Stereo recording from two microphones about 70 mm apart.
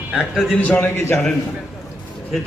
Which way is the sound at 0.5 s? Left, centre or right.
Left.